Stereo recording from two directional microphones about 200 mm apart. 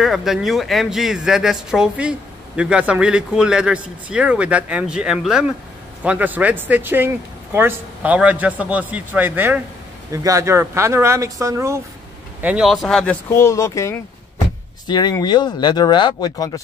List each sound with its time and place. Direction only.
0.0 s a man's voice: centre (ahead or behind); by 16.6 s 20° left (ahead or behind)